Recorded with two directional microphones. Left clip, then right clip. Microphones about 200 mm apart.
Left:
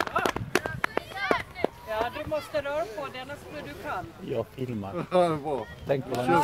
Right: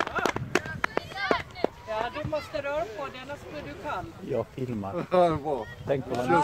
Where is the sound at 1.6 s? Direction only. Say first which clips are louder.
Left 1 dB; 40° right (ahead or behind).